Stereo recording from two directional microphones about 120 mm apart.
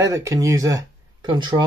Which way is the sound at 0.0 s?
25° right (ahead or behind).